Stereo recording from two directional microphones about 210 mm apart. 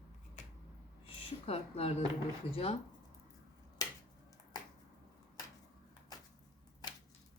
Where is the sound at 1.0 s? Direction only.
25° left (ahead or behind).